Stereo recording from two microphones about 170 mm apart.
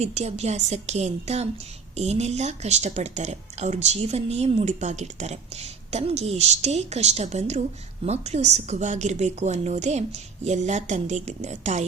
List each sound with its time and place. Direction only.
0.0 s speech: 40° right (ahead or behind)